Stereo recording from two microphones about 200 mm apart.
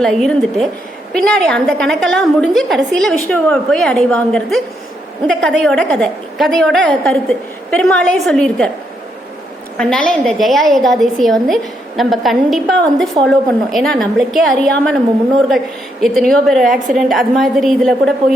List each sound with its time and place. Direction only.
0.0 s a woman's voice: centre (ahead or behind)
9.7 s a woman's voice: 5° left (ahead or behind)